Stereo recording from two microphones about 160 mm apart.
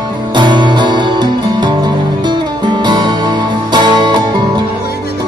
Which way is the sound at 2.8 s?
25° right (ahead or behind).